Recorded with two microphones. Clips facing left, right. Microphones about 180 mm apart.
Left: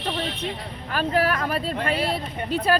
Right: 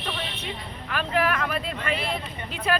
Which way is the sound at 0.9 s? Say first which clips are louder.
Left 2 dB; 35° left (ahead or behind).